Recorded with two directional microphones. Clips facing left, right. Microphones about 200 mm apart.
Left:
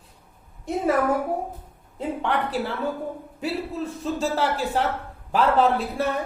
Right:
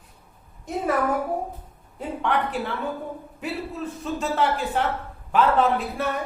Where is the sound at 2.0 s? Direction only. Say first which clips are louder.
Even; 35° left (ahead or behind).